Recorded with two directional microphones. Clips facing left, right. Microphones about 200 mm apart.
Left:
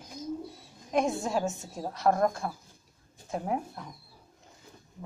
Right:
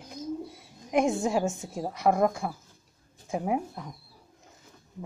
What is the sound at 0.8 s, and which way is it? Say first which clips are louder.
Speech: right 3 dB; 15° right (ahead or behind).